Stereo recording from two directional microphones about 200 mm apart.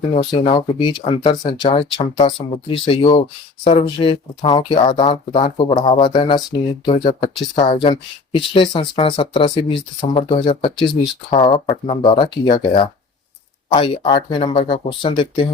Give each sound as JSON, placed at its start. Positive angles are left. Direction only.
{"t": 0.1, "sound": "speech", "side_deg": 35}